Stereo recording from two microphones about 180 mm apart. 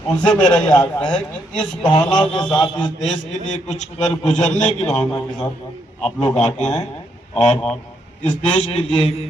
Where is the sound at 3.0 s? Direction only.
40° left (ahead or behind).